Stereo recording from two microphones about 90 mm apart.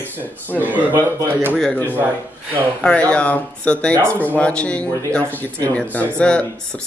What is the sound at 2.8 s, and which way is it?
Speech, 10° left (ahead or behind).